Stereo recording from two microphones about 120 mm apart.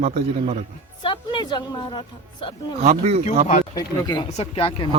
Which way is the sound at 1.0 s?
40° left (ahead or behind).